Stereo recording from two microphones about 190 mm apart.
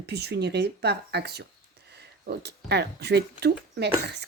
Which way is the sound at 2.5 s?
60° right (ahead or behind).